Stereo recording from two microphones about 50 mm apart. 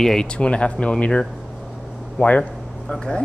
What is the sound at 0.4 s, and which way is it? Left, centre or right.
Speech, left.